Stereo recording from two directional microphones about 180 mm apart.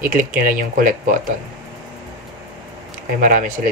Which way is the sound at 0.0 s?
50° right (ahead or behind).